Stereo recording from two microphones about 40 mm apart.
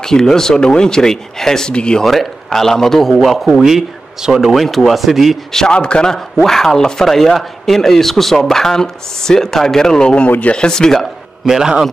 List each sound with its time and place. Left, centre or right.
0.0 s speech: centre
1.7 s a man's voice: left
2.0 s a man's voice: centre
5.7 s a man's voice: left
6.1 s a man's voice: centre
11.4 s a man's voice: centre